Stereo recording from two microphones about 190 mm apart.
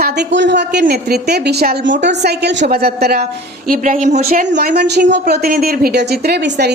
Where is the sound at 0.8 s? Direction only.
55° right (ahead or behind).